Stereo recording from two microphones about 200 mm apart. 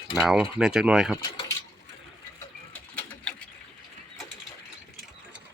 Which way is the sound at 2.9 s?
5° left (ahead or behind).